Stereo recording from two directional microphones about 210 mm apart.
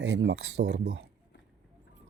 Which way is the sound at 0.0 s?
60° right (ahead or behind).